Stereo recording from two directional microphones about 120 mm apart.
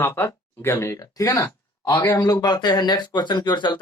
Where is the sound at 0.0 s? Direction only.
20° left (ahead or behind).